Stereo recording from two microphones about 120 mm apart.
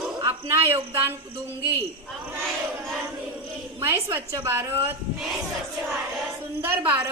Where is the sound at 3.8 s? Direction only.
20° right (ahead or behind).